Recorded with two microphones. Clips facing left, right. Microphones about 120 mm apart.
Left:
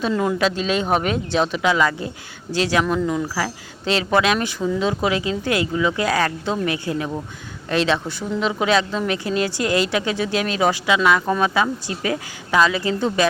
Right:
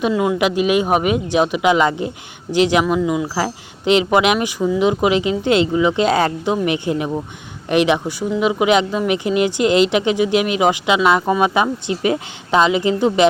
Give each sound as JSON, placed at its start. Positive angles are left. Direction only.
{"t": 0.1, "sound": "a man's voice", "side_deg": -5}
{"t": 0.3, "sound": "a woman's voice", "side_deg": -15}
{"t": 2.8, "sound": "a woman's voice", "side_deg": -5}
{"t": 3.3, "sound": "a woman's voice", "side_deg": -20}